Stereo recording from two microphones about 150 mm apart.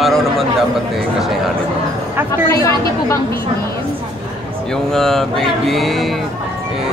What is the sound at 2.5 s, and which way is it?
Speech, 20° left (ahead or behind).